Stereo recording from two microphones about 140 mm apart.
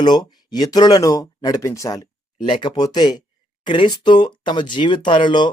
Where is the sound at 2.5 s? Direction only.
35° left (ahead or behind).